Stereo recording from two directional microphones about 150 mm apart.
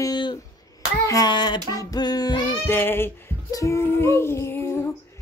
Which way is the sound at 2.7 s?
15° left (ahead or behind).